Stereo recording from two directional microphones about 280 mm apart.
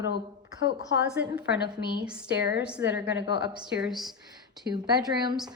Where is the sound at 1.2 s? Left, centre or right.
Centre.